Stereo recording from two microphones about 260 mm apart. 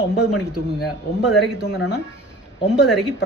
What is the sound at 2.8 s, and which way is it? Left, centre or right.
Speech, centre.